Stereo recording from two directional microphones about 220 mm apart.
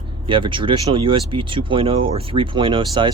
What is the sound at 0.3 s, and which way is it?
Speech, 20° right (ahead or behind).